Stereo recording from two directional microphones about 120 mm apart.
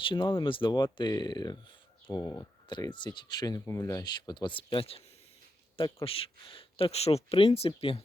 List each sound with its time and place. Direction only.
0.0 s speech: 45° left (ahead or behind)
6.1 s speech: 50° left (ahead or behind)